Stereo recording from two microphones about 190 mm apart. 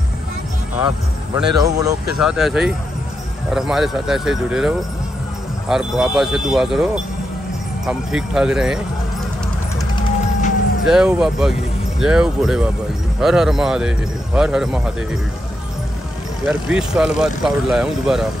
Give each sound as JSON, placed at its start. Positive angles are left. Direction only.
{"t": 1.3, "sound": "speech", "side_deg": -20}
{"t": 2.1, "sound": "speech", "side_deg": 0}
{"t": 9.8, "sound": "music", "side_deg": 25}
{"t": 10.9, "sound": "speech", "side_deg": -5}
{"t": 16.4, "sound": "speech", "side_deg": -5}